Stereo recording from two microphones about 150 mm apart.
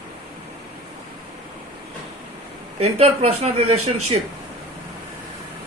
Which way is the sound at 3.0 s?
45° right (ahead or behind).